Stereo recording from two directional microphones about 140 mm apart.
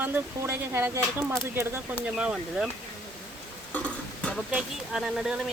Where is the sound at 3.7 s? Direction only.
10° left (ahead or behind).